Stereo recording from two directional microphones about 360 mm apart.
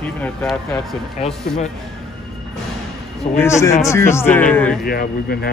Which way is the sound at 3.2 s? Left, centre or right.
Centre.